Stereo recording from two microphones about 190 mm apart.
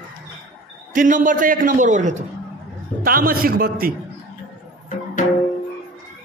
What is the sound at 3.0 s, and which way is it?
Speech, 50° right (ahead or behind).